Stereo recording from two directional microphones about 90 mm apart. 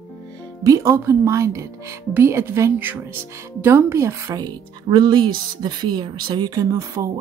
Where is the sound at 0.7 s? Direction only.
30° right (ahead or behind).